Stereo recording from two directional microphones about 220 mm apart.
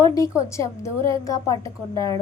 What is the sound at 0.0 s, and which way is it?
A woman's voice, 15° left (ahead or behind).